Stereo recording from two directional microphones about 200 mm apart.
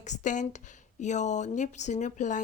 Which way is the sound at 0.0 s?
40° left (ahead or behind).